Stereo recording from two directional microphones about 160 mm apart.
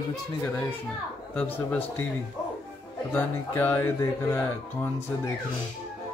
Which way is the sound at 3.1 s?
10° left (ahead or behind).